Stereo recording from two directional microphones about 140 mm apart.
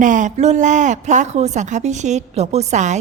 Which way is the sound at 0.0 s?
65° right (ahead or behind).